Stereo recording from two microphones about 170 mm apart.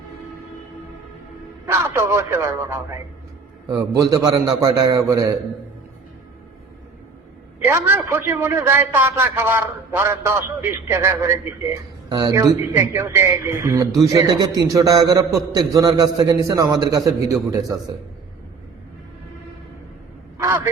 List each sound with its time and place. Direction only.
1.6 s a man's voice: 15° right (ahead or behind)
7.6 s a man's voice: 15° right (ahead or behind)